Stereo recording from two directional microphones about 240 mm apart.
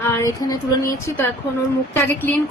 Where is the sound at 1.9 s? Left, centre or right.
Centre.